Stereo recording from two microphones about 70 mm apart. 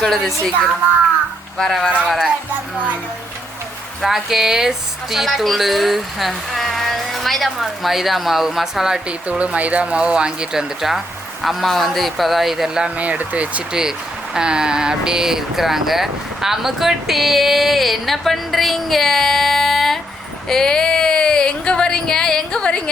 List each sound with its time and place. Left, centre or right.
0.0 s speech: centre
1.5 s speech: centre
2.0 s speech: centre
4.0 s speech: centre
9.4 s speech: centre
13.0 s speech: right; by 20.0 s centre
20.5 s a sound: centre